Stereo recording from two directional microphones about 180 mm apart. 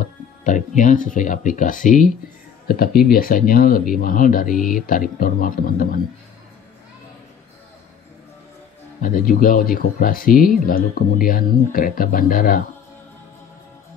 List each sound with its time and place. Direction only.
0.0 s speech: 45° left (ahead or behind)
9.0 s speech: 50° left (ahead or behind)